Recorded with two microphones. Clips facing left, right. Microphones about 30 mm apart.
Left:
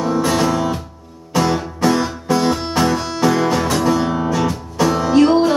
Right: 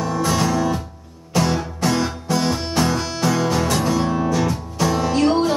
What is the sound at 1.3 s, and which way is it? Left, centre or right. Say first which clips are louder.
Music: left 3 dB; centre.